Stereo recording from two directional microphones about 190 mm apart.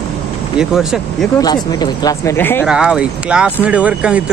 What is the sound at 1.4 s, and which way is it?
Speech, 20° left (ahead or behind).